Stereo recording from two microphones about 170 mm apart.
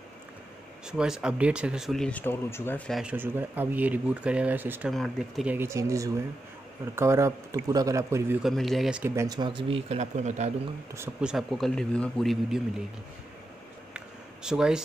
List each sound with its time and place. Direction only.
0.8 s speech: 5° right (ahead or behind); by 2.8 s 15° left (ahead or behind)
2.9 s speech: 5° right (ahead or behind)
4.9 s speech: centre (ahead or behind); by 8.4 s 15° right (ahead or behind)
8.4 s speech: centre (ahead or behind)
9.1 s speech: 20° right (ahead or behind); by 10.5 s 40° right (ahead or behind)
11.0 s speech: 5° right (ahead or behind)
13.9 s a sound: 5° right (ahead or behind)